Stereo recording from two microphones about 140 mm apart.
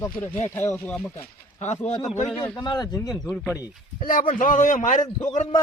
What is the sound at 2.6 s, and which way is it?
Speech, 30° left (ahead or behind).